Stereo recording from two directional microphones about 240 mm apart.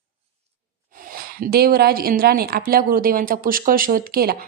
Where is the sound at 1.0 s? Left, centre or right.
Right.